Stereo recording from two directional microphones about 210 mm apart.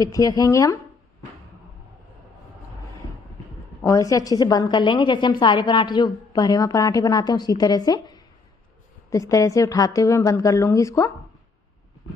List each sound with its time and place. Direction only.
0.0 s a woman's voice: 15° left (ahead or behind)
3.8 s a woman's voice: 15° left (ahead or behind)